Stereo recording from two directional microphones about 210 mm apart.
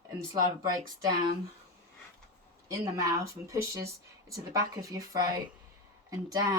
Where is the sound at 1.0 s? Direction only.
20° right (ahead or behind).